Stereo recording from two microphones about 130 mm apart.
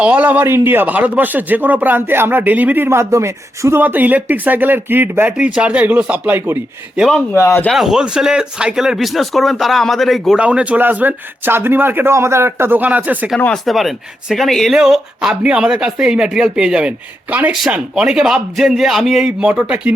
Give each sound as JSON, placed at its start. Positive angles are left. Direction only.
{"t": 0.0, "sound": "speech", "side_deg": -10}
{"t": 7.3, "sound": "speech", "side_deg": 20}
{"t": 7.7, "sound": "speech", "side_deg": -5}
{"t": 13.4, "sound": "speech", "side_deg": 5}